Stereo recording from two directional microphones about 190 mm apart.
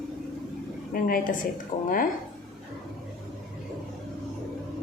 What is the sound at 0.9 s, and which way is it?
Speech, 45° left (ahead or behind).